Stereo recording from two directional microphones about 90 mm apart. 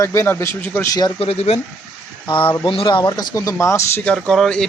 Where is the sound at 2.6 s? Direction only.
70° left (ahead or behind).